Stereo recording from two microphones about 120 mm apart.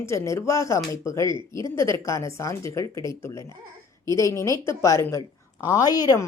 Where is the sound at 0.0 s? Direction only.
20° left (ahead or behind).